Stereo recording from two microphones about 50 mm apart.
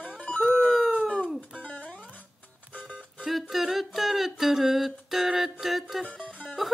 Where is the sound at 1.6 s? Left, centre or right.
Left.